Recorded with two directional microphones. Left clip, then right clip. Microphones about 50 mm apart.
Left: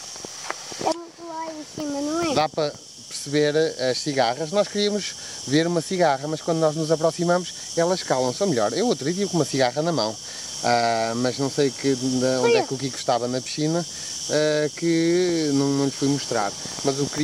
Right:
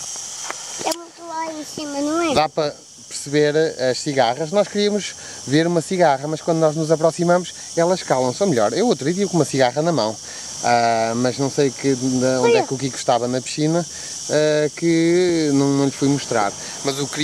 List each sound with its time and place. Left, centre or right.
0.9 s a sound: right
2.4 s speech: centre
16.9 s speech: right